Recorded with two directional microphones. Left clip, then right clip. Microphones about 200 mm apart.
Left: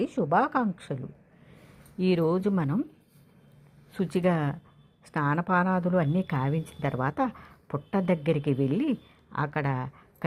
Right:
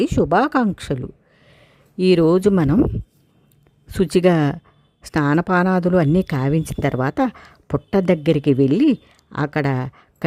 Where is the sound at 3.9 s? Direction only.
50° right (ahead or behind).